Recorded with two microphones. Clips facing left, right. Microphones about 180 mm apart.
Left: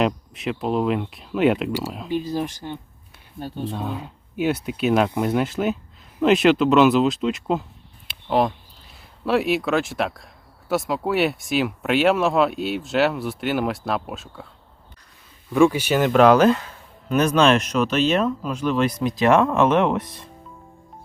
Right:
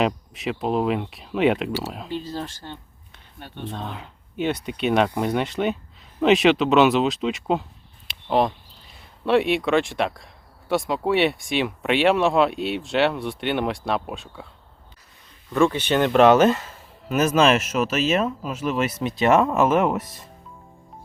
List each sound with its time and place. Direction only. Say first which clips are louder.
0.0 s speech: left 1 dB; centre (ahead or behind)
2.0 s speech: left 5 dB; 15° left (ahead or behind)
3.4 s speech: left 6 dB; 35° left (ahead or behind)
3.7 s speech: left 4 dB; 10° left (ahead or behind)
8.0 s a sound: even; centre (ahead or behind)
9.2 s speech: right 1 dB; centre (ahead or behind)
15.5 s speech: left 2 dB; 10° left (ahead or behind)